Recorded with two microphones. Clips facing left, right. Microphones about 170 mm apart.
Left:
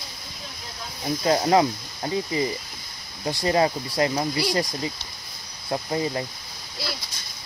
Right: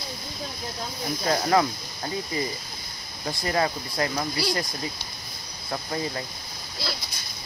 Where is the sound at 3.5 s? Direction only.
25° left (ahead or behind).